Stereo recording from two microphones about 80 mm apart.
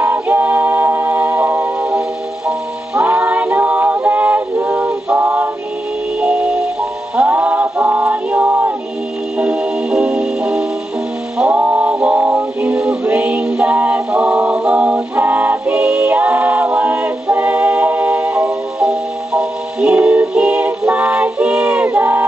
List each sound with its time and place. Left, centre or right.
0.0 s music: right
1.8 s music: centre
3.1 s a sound: right
6.2 s music: centre
9.4 s music: centre